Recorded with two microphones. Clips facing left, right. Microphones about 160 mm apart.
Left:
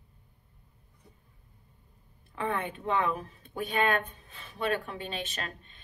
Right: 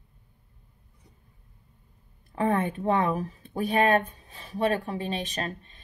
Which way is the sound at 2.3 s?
40° right (ahead or behind).